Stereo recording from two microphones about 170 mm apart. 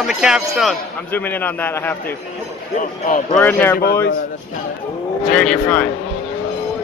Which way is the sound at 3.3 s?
10° left (ahead or behind).